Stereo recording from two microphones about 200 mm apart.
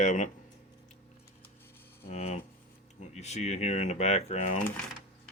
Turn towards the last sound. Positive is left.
turn(degrees=40)  # may be behind; listen again after turning